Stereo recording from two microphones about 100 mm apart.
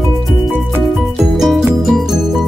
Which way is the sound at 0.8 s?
Centre (ahead or behind).